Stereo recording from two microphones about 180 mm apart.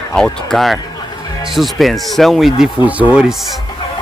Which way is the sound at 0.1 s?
5° left (ahead or behind).